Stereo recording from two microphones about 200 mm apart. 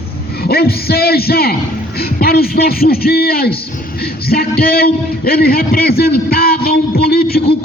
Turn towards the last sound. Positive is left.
turn(degrees=50)  # may be behind; listen again after turning